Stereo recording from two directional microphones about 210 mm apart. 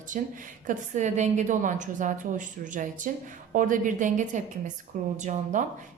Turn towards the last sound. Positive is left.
turn(degrees=-35)  # may be behind; listen again after turning